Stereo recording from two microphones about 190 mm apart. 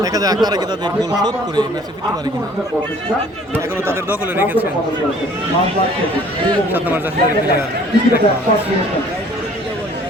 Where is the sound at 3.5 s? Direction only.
15° right (ahead or behind).